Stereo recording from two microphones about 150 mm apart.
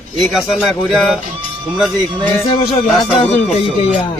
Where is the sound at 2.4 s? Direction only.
40° left (ahead or behind).